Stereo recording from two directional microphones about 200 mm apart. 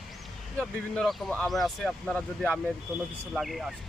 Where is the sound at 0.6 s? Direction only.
5° left (ahead or behind).